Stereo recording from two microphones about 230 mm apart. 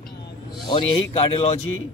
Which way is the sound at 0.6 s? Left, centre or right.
Left.